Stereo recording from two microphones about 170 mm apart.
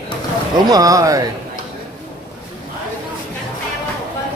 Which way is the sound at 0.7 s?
20° right (ahead or behind).